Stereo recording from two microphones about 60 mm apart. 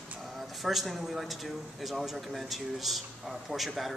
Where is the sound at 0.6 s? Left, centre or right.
Centre.